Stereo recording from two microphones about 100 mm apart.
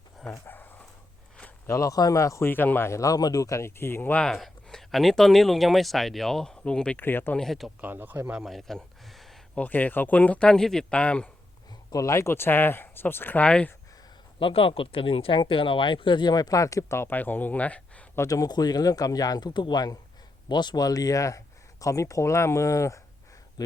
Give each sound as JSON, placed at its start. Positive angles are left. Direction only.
{"t": 0.4, "sound": "dog", "side_deg": 20}
{"t": 1.6, "sound": "speech", "side_deg": 30}
{"t": 4.2, "sound": "speech", "side_deg": 0}
{"t": 7.0, "sound": "speech", "side_deg": 20}
{"t": 7.3, "sound": "speech", "side_deg": 0}
{"t": 7.8, "sound": "speech", "side_deg": -20}
{"t": 8.4, "sound": "a sound", "side_deg": 0}
{"t": 9.6, "sound": "speech", "side_deg": 15}
{"t": 11.9, "sound": "speech", "side_deg": 35}
{"t": 14.3, "sound": "speech", "side_deg": 65}
{"t": 18.2, "sound": "speech", "side_deg": 35}